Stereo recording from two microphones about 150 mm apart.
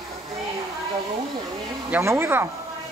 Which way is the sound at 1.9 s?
15° right (ahead or behind).